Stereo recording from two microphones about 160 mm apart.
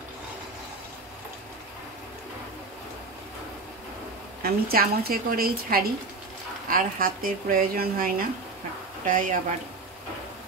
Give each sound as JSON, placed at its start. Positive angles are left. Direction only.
{"t": 4.4, "sound": "a woman's voice", "side_deg": -70}